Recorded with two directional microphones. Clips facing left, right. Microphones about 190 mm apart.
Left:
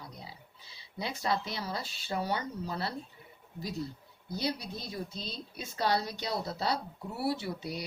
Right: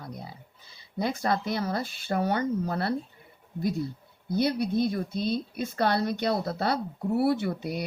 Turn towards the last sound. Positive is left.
turn(degrees=-55)  # may be behind; listen again after turning